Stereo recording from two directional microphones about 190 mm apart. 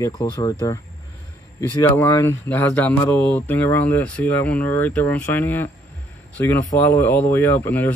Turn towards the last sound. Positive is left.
turn(degrees=15)  # may be behind; listen again after turning